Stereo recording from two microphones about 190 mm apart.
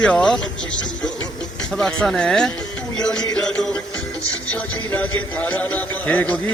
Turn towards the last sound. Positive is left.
turn(degrees=10)  # may be behind; listen again after turning